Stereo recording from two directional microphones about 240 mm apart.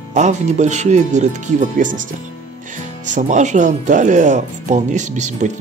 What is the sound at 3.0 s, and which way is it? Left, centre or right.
Speech, right.